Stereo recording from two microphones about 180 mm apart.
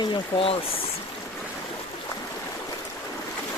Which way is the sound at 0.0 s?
30° left (ahead or behind).